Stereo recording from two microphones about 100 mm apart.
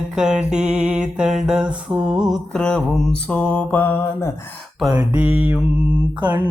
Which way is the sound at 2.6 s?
10° left (ahead or behind).